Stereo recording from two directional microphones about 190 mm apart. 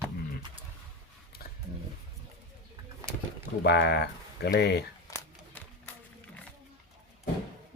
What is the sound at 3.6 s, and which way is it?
Speech, 60° left (ahead or behind).